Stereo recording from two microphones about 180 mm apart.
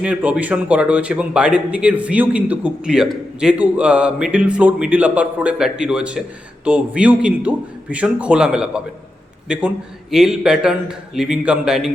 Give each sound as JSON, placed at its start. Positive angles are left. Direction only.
{"t": 0.0, "sound": "a man's voice", "side_deg": -5}